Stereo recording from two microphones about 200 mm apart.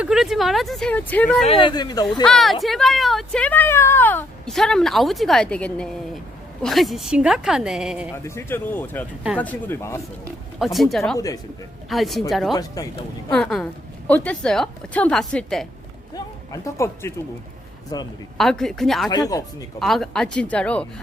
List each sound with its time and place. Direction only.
0.0 s speech: 5° right (ahead or behind)
1.5 s speech: 25° left (ahead or behind)
2.2 s speech: centre (ahead or behind)
8.1 s speech: 10° left (ahead or behind)
10.6 s speech: centre (ahead or behind)
12.5 s speech: 15° left (ahead or behind)
13.3 s speech: 5° left (ahead or behind)
16.1 s speech: 15° left (ahead or behind)
18.3 s speech: centre (ahead or behind)
19.1 s speech: 15° left (ahead or behind)
19.8 s speech: centre (ahead or behind)